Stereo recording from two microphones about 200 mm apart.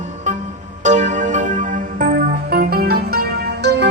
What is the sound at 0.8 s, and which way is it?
Music, 35° right (ahead or behind).